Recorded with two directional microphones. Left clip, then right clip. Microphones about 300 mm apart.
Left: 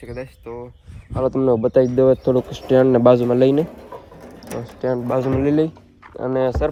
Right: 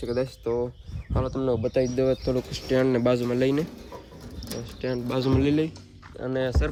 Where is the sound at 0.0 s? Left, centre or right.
Centre.